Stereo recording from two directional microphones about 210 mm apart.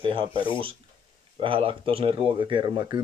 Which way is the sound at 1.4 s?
25° right (ahead or behind).